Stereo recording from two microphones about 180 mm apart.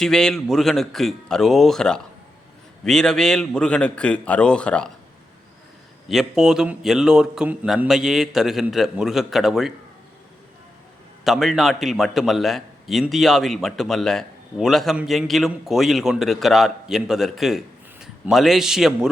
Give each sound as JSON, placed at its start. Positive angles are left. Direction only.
{"t": 0.0, "sound": "a man's voice", "side_deg": 5}
{"t": 6.1, "sound": "a man's voice", "side_deg": 0}
{"t": 11.2, "sound": "a man's voice", "side_deg": 0}